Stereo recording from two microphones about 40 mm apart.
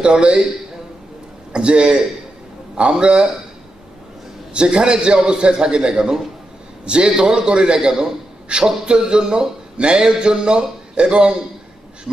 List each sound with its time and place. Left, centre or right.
0.0 s a man's voice: right
1.5 s a man's voice: right
4.6 s a man's voice: right